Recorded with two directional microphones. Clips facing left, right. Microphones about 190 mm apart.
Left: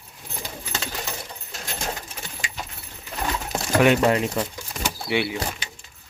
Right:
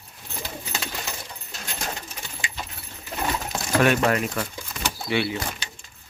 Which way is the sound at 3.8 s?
20° left (ahead or behind).